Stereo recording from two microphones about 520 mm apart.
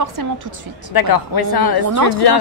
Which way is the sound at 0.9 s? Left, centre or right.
Left.